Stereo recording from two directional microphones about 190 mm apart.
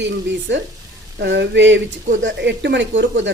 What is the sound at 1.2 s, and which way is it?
Speech, 65° right (ahead or behind).